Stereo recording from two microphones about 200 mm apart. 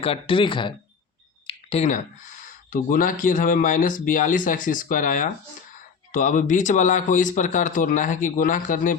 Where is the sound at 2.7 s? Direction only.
45° left (ahead or behind).